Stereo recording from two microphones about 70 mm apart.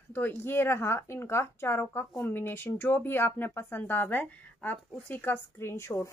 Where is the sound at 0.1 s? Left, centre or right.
Left.